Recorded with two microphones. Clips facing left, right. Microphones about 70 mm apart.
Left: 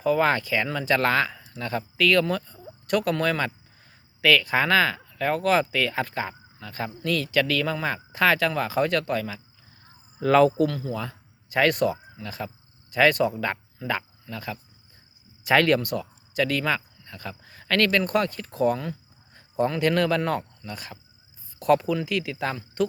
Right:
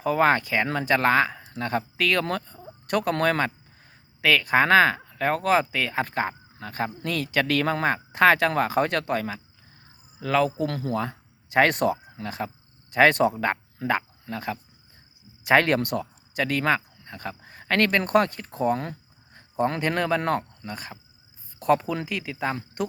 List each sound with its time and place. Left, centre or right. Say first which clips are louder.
0.0 s speech: right 1 dB; right
4.2 s speech: right 1 dB; right
6.1 s speech: right 3 dB; right
10.2 s a man's voice: left 5 dB; centre
10.9 s speech: right 5 dB; right
15.8 s speech: right 2 dB; right